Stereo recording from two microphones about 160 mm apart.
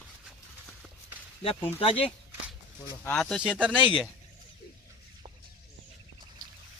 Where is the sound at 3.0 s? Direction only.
5° left (ahead or behind).